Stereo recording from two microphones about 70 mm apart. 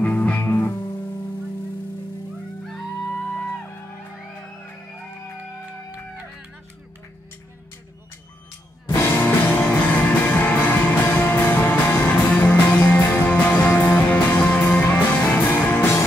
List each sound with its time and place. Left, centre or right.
0.0 s music: left
2.6 s music: centre
8.9 s music: left